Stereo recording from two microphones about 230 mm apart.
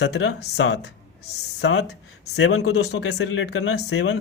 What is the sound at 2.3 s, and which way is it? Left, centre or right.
Speech, left.